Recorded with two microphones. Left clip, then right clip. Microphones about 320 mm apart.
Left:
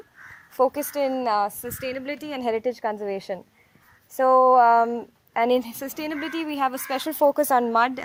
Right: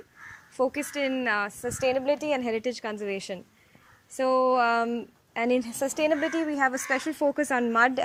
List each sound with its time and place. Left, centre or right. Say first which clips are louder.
0.5 s a woman's voice: left 5 dB; left
1.7 s a woman's voice: right 5 dB; centre
2.5 s a woman's voice: left 5 dB; left
5.8 s a woman's voice: right 5 dB; centre
7.8 s speech: left 1 dB; centre